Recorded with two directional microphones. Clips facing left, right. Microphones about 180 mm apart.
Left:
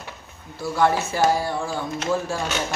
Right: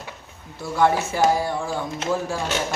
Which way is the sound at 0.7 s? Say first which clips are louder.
Right 1 dB; 15° right (ahead or behind).